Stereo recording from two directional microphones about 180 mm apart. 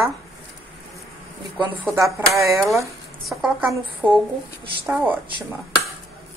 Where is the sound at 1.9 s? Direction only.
15° right (ahead or behind).